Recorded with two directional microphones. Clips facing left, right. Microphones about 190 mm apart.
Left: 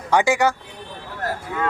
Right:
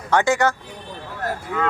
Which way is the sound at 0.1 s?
10° left (ahead or behind).